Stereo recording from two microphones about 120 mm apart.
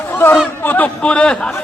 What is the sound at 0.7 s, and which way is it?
Speech, 10° left (ahead or behind).